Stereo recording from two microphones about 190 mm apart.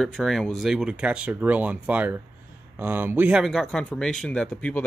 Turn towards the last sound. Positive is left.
turn(degrees=5)  # may be behind; listen again after turning